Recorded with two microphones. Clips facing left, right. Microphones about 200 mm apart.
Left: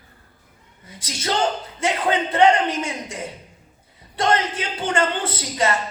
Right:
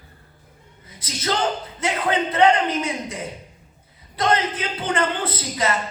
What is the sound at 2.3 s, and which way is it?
Speech, 25° left (ahead or behind).